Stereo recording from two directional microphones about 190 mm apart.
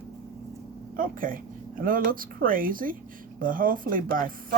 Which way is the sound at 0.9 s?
45° right (ahead or behind).